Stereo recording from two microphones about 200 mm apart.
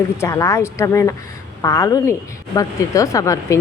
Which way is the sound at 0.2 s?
15° left (ahead or behind).